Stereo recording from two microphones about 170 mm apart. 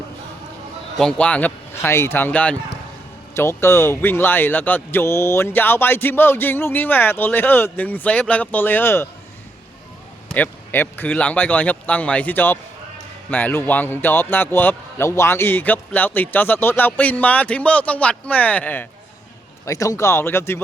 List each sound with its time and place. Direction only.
0.9 s a man's voice: 5° left (ahead or behind)
10.3 s a man's voice: 10° left (ahead or behind)